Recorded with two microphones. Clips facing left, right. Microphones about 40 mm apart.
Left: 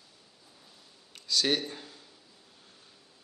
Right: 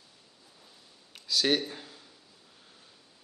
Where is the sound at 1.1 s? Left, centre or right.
Centre.